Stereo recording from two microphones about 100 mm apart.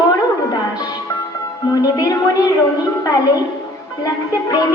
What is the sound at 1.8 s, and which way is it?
Music, 35° left (ahead or behind).